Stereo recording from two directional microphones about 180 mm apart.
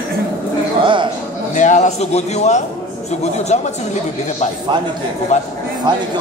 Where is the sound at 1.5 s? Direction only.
40° left (ahead or behind).